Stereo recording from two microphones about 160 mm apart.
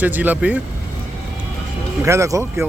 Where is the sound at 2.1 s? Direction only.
20° right (ahead or behind).